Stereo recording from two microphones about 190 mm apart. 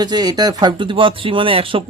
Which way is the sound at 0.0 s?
20° right (ahead or behind).